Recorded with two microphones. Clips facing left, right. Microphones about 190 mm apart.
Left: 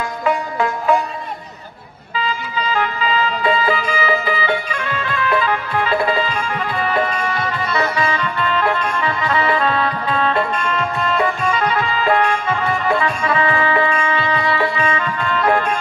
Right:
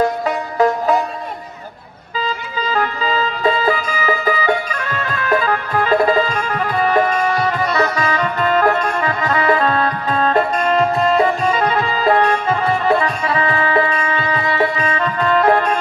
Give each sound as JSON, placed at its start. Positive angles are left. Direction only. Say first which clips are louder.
{"t": 0.0, "sound": "music", "louder": "right 3 dB", "side_deg": -40}
{"t": 2.7, "sound": "music", "louder": "right 1 dB", "side_deg": -40}